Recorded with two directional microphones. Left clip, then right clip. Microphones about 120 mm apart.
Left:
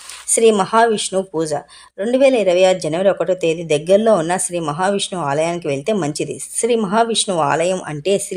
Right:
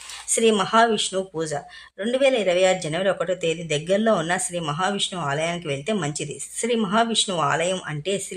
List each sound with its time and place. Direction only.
0.3 s speech: 40° left (ahead or behind)